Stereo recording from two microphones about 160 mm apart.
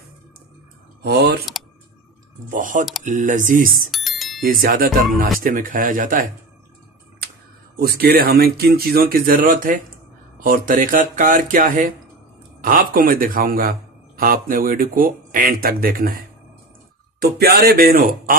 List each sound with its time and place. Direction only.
1.0 s speech: 85° right
2.5 s speech: 55° right (ahead or behind)
3.9 s music: centre (ahead or behind)
4.4 s speech: 65° right (ahead or behind)
7.8 s speech: 75° right (ahead or behind)
17.2 s speech: 75° right (ahead or behind)